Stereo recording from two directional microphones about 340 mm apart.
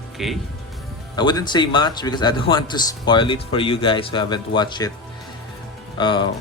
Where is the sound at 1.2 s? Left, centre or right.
Centre.